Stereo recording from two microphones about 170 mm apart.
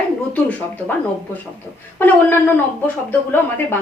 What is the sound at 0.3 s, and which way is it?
Speech, 10° left (ahead or behind).